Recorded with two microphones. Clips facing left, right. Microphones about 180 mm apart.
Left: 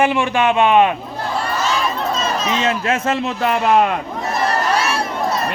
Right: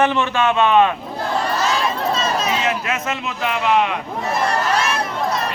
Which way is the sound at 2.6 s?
30° left (ahead or behind).